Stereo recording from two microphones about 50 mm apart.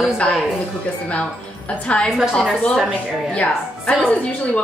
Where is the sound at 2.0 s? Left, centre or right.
Centre.